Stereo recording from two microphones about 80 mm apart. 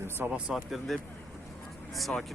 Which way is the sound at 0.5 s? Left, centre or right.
Centre.